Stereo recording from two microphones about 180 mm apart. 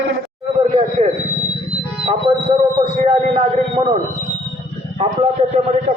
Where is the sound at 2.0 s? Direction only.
35° right (ahead or behind).